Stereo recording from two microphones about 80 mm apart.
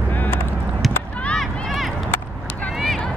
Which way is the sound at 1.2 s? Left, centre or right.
Centre.